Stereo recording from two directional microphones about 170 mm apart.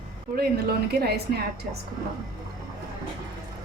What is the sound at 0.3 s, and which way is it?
A woman's voice, 70° right (ahead or behind).